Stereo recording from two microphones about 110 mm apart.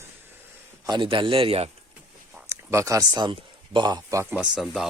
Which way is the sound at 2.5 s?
25° right (ahead or behind).